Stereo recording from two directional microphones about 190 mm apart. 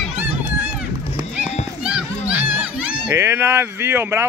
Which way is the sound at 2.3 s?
5° right (ahead or behind).